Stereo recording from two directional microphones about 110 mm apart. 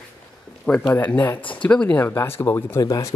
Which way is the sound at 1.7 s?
10° left (ahead or behind).